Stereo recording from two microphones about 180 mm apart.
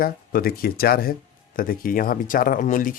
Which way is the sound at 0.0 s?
55° left (ahead or behind).